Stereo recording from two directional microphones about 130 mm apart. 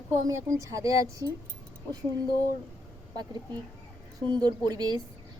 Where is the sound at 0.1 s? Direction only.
25° right (ahead or behind).